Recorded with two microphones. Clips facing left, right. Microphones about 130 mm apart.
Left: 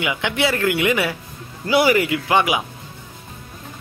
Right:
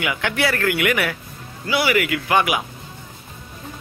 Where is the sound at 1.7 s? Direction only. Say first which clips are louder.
Left 4 dB; 40° left (ahead or behind).